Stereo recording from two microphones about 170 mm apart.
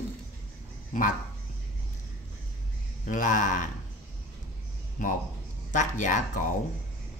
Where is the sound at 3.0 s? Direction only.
50° left (ahead or behind).